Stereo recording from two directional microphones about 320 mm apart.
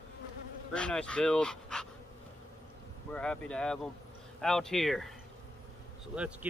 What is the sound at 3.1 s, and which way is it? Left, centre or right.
Speech, centre.